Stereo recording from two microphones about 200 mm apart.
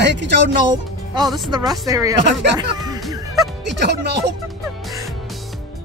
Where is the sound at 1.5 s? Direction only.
20° right (ahead or behind).